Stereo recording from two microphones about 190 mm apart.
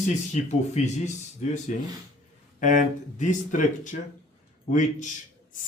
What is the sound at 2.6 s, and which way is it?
Speech, 45° left (ahead or behind).